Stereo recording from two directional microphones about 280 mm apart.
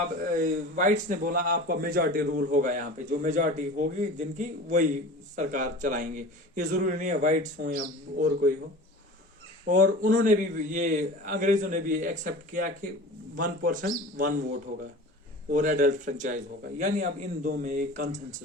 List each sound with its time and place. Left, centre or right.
0.2 s speech: right
9.6 s speech: right
15.5 s speech: right